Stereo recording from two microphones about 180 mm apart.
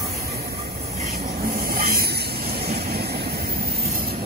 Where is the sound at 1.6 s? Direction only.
55° right (ahead or behind).